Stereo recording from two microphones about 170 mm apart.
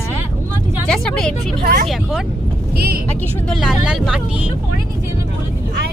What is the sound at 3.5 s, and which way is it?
Speech, centre (ahead or behind).